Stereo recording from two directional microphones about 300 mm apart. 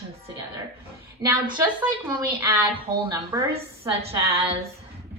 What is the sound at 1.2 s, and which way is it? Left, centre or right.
A woman's voice, centre.